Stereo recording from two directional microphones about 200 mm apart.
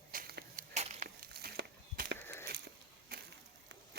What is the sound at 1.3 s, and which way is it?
Walk, 50° right (ahead or behind).